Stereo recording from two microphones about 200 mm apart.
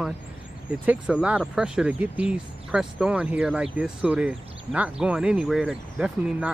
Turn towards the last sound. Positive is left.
turn(degrees=-5)  # may be behind; listen again after turning